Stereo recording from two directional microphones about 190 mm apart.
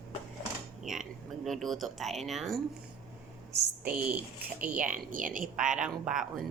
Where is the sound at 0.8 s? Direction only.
Centre (ahead or behind).